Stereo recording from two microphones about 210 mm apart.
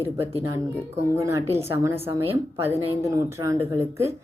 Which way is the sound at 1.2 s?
15° right (ahead or behind).